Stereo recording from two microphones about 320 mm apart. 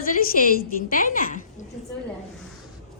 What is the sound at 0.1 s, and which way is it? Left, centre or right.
A woman's voice, left.